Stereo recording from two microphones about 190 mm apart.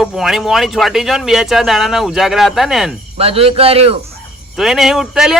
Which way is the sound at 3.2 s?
30° right (ahead or behind).